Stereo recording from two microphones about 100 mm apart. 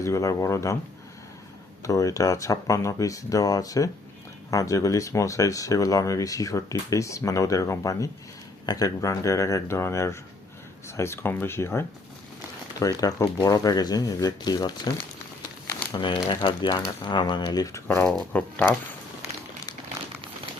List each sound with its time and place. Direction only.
0.0 s speech: 30° left (ahead or behind)
1.8 s speech: 35° left (ahead or behind)
12.8 s speech: 40° left (ahead or behind)
16.0 s speech: 55° left (ahead or behind); by 17.8 s 35° left (ahead or behind)
18.5 s speech: 20° left (ahead or behind)